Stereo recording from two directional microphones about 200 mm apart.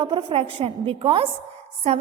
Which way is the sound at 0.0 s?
25° right (ahead or behind).